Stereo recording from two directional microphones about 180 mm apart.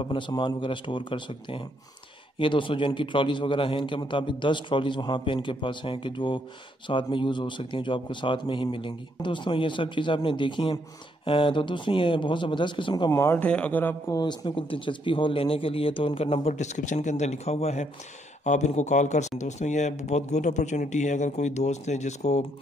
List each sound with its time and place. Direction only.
0.0 s a man's voice: 25° left (ahead or behind); by 13.9 s 10° left (ahead or behind)
14.1 s speech: 25° left (ahead or behind)